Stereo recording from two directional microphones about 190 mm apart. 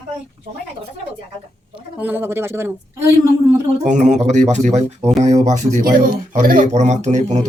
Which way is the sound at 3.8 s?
40° right (ahead or behind).